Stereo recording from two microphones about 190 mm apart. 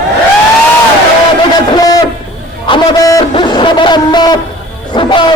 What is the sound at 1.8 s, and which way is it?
Hoot, 20° left (ahead or behind).